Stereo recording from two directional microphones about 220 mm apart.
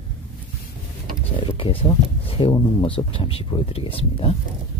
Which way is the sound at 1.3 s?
25° left (ahead or behind).